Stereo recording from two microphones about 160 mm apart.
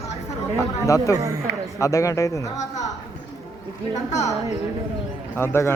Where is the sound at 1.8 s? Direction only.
20° left (ahead or behind).